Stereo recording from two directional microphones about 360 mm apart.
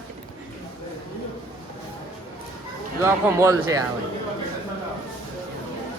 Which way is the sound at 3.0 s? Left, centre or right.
Centre.